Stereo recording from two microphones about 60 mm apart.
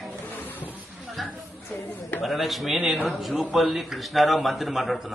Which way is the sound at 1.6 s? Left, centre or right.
Left.